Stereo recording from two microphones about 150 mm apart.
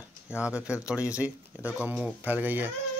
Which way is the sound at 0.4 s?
5° right (ahead or behind).